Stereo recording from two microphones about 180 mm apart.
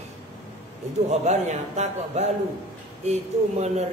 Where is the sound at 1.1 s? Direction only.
40° right (ahead or behind).